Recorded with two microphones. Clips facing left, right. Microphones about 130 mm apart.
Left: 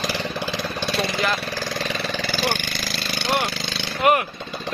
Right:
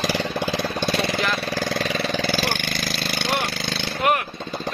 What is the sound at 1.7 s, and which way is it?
Vehicle, 55° right (ahead or behind).